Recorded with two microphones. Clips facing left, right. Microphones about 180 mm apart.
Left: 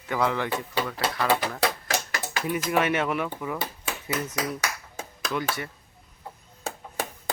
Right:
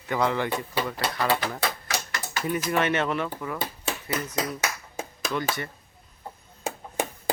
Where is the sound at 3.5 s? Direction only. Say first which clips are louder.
Right 1 dB; 25° right (ahead or behind).